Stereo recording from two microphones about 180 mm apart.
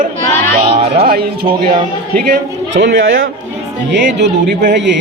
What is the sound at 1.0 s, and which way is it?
Speech, 55° right (ahead or behind).